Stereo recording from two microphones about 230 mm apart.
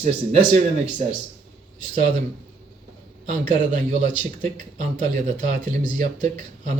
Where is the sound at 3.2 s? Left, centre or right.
Right.